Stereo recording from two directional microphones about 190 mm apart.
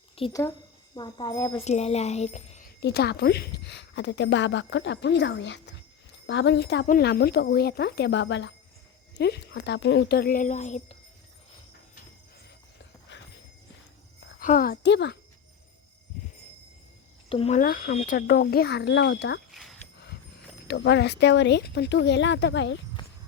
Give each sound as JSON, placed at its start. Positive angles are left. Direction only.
{"t": 0.2, "sound": "speech", "side_deg": 30}
{"t": 2.8, "sound": "a woman's voice", "side_deg": 60}
{"t": 6.8, "sound": "a woman's voice", "side_deg": 50}
{"t": 14.3, "sound": "a woman's voice", "side_deg": 50}
{"t": 17.2, "sound": "speech", "side_deg": 30}
{"t": 17.6, "sound": "speech", "side_deg": 45}
{"t": 19.5, "sound": "a sound", "side_deg": 0}
{"t": 20.7, "sound": "a woman's voice", "side_deg": 65}